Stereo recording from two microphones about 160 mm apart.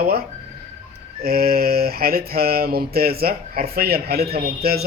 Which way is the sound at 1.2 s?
70° right (ahead or behind).